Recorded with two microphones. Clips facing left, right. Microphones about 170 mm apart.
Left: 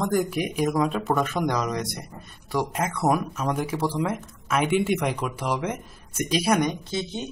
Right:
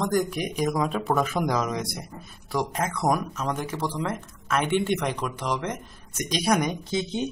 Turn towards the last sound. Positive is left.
turn(degrees=-15)  # may be behind; listen again after turning